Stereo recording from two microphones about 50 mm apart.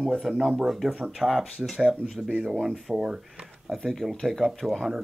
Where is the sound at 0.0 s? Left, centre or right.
Centre.